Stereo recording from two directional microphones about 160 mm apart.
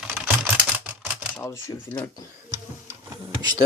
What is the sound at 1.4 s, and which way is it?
Speech, 15° left (ahead or behind).